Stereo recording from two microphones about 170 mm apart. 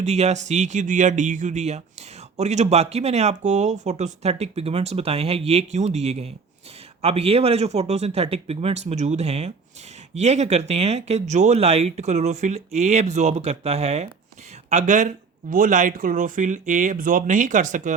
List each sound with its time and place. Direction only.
0.0 s speech: 40° right (ahead or behind)